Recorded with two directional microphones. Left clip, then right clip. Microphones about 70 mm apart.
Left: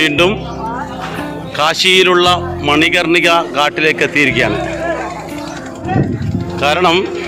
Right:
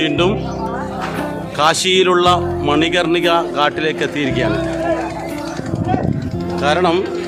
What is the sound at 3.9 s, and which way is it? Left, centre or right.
Speech, centre.